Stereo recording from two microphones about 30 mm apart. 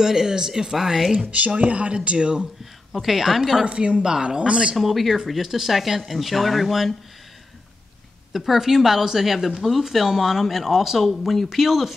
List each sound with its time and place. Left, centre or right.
0.0 s speech: centre
1.3 s speech: right
2.9 s a woman's voice: centre
3.6 s speech: right
4.7 s speech: centre
8.3 s speech: centre
11.1 s speech: centre